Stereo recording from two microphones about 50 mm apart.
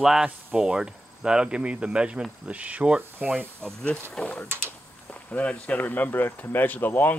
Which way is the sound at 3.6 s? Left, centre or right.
Centre.